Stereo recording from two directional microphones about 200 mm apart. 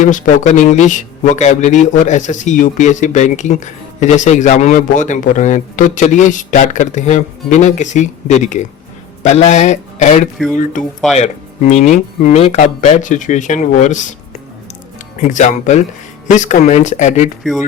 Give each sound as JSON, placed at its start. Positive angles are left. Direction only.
{"t": 0.0, "sound": "a man's voice", "side_deg": 40}
{"t": 15.2, "sound": "a man's voice", "side_deg": 35}